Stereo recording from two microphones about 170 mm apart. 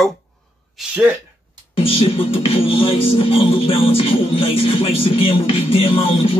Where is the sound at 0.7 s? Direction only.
5° right (ahead or behind).